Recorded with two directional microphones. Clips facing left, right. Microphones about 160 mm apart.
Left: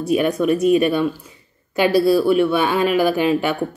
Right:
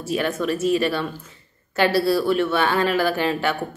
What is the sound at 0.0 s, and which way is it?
Speech, 15° left (ahead or behind).